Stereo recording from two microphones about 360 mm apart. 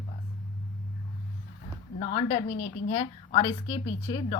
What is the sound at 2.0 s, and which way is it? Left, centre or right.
Speech, centre.